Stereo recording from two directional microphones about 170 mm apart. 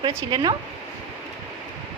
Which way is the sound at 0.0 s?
30° right (ahead or behind).